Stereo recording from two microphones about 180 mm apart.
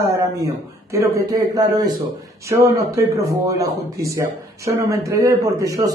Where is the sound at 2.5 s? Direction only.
15° right (ahead or behind).